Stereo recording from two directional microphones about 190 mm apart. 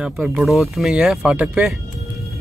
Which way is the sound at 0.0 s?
5° right (ahead or behind).